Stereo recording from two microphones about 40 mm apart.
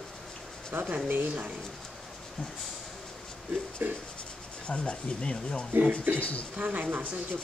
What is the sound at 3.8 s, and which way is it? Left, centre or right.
Writing, right.